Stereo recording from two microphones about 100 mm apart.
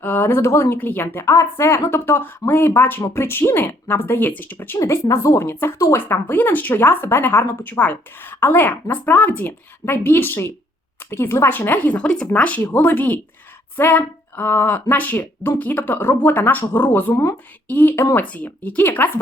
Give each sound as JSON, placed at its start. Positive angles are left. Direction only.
{"t": 0.0, "sound": "speech", "side_deg": 20}
{"t": 4.8, "sound": "speech", "side_deg": 30}